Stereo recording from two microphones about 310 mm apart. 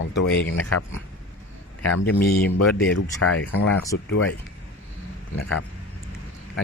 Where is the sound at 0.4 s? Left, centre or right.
Left.